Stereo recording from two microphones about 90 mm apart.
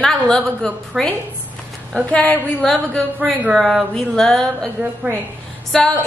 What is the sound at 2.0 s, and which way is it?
Speech, 15° left (ahead or behind).